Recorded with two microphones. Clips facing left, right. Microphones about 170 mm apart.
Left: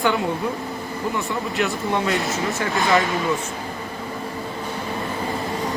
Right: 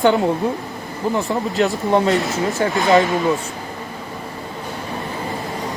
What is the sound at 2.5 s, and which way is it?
Speech, 25° right (ahead or behind).